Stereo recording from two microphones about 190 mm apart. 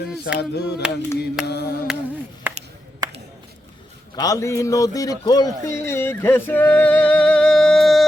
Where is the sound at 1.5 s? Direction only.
55° left (ahead or behind).